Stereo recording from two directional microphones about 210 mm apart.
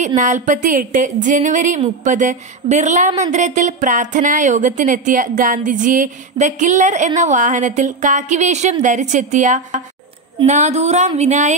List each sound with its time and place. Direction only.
0.0 s speech: 35° right (ahead or behind)